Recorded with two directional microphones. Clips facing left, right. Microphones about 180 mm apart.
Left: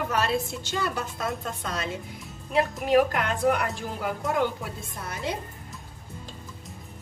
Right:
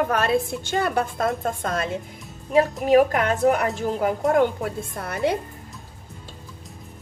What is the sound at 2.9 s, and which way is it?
A woman's voice, 45° right (ahead or behind).